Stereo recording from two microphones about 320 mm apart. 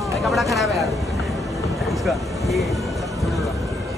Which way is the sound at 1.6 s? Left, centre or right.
Centre.